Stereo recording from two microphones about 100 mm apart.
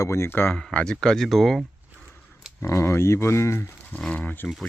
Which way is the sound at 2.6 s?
25° left (ahead or behind).